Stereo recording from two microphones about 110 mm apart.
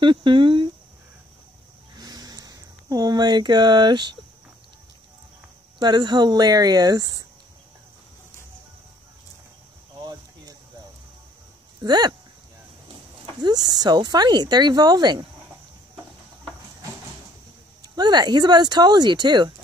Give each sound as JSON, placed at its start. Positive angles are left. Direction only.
{"t": 0.0, "sound": "speech", "side_deg": -50}
{"t": 2.0, "sound": "a sound", "side_deg": -40}
{"t": 5.8, "sound": "speech", "side_deg": -40}
{"t": 9.9, "sound": "cricket", "side_deg": -35}
{"t": 11.8, "sound": "speech", "side_deg": -40}
{"t": 13.4, "sound": "speech", "side_deg": -40}
{"t": 17.8, "sound": "speech", "side_deg": -40}